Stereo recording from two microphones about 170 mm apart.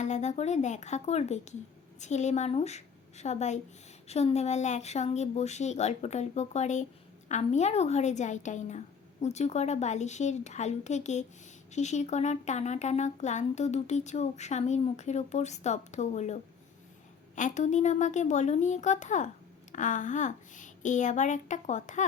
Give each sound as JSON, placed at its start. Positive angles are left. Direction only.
{"t": 0.0, "sound": "speech", "side_deg": 45}